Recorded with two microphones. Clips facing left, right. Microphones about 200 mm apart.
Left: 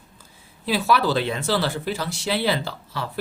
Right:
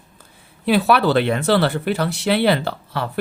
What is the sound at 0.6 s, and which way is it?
Speech, 60° right (ahead or behind).